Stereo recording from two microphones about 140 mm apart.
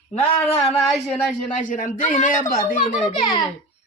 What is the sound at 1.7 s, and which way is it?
Speech, 70° left (ahead or behind).